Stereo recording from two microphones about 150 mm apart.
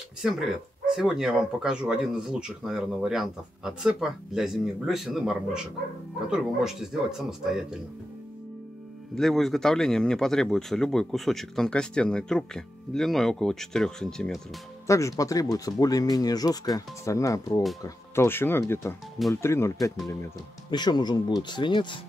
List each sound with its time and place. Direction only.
0.2 s speech: 5° right (ahead or behind)
9.1 s speech: centre (ahead or behind)
14.9 s speech: 20° left (ahead or behind)
20.7 s speech: 30° left (ahead or behind)